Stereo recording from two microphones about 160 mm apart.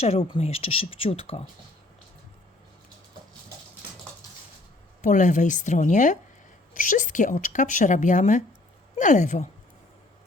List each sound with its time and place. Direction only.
0.0 s speech: 40° left (ahead or behind)
5.0 s a woman's voice: 50° left (ahead or behind)